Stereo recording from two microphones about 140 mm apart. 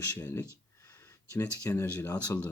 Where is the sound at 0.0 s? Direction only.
15° left (ahead or behind).